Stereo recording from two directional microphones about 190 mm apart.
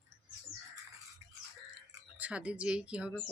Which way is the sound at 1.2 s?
15° right (ahead or behind).